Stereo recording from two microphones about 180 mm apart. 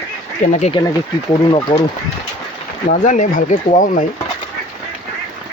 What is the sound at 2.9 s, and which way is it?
Speech, 45° left (ahead or behind).